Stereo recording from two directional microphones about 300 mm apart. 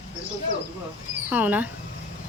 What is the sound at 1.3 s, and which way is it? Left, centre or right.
Speech, centre.